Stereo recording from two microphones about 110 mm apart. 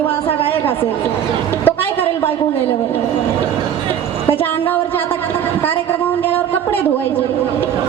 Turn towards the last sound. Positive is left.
turn(degrees=20)  # may be behind; listen again after turning